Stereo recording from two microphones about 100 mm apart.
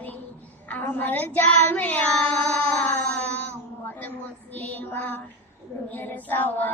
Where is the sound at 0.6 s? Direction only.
20° left (ahead or behind).